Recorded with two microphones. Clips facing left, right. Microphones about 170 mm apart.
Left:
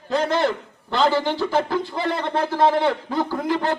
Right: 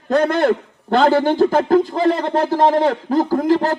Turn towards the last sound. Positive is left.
turn(degrees=-40)  # may be behind; listen again after turning